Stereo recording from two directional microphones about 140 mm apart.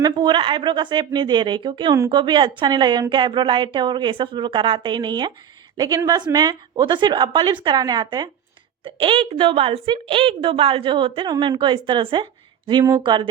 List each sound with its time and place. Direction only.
0.0 s a woman's voice: 35° right (ahead or behind)